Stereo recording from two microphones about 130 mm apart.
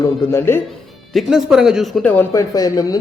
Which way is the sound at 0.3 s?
20° left (ahead or behind).